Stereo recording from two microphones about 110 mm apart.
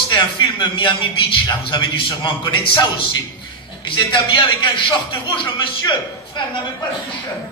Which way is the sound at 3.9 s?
45° left (ahead or behind).